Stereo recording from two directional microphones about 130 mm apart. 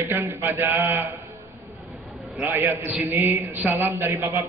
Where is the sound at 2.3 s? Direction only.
15° right (ahead or behind).